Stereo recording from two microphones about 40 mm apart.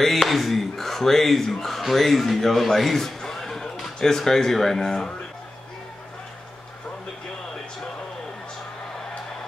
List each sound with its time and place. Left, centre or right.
0.0 s speech: centre